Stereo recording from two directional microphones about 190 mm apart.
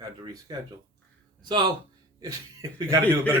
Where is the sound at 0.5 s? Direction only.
25° right (ahead or behind).